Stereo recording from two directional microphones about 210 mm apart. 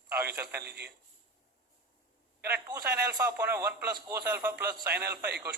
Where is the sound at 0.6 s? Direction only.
50° right (ahead or behind).